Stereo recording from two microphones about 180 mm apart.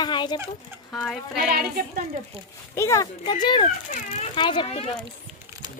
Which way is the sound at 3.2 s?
25° left (ahead or behind).